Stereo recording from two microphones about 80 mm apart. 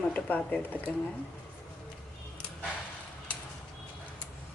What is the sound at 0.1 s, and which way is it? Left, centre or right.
Speech, centre.